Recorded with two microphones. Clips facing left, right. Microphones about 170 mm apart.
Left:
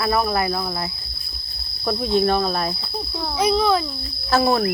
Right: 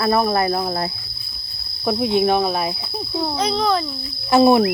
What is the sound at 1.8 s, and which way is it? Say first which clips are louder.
Cricket: right 2 dB; 10° right (ahead or behind).